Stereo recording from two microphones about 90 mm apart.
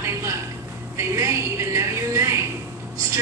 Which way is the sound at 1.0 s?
35° right (ahead or behind).